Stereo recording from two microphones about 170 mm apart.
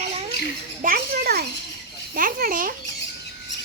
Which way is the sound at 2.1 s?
55° right (ahead or behind).